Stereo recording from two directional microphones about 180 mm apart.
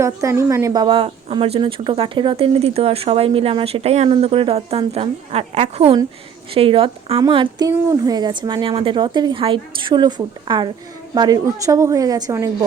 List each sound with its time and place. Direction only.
0.0 s a woman's voice: 15° right (ahead or behind)